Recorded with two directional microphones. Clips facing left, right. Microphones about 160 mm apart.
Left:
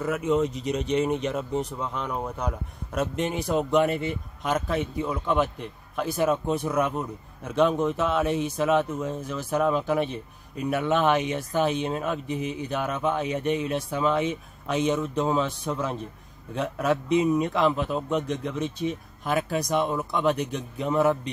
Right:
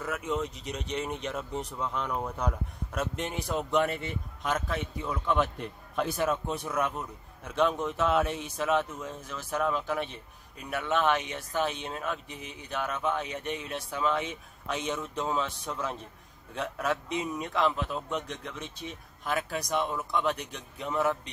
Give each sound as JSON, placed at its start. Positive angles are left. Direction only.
{"t": 0.0, "sound": "a man's voice", "side_deg": 10}